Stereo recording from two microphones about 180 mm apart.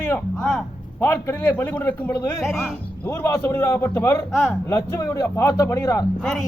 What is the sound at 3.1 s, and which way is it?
Speech, 15° left (ahead or behind).